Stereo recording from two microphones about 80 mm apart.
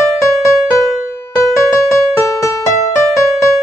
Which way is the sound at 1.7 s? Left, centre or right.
Left.